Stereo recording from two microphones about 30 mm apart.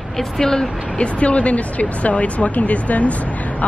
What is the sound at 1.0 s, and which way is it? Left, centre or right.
Speech, left.